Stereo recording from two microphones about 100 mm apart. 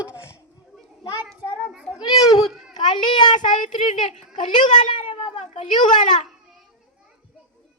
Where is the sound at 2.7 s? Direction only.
50° left (ahead or behind).